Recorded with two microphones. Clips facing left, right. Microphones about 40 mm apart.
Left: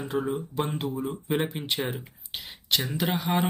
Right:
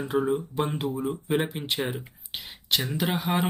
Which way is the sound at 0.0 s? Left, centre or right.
Centre.